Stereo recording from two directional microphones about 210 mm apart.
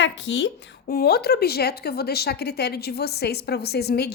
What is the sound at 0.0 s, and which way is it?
A woman's voice, 60° left (ahead or behind).